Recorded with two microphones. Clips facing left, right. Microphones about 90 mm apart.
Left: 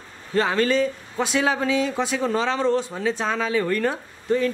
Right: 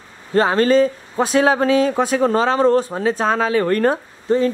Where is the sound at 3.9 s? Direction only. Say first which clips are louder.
Right 5 dB; 30° right (ahead or behind).